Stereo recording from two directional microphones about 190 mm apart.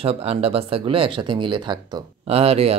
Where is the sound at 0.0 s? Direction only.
30° right (ahead or behind).